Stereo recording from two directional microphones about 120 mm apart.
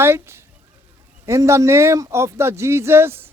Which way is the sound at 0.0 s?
20° right (ahead or behind).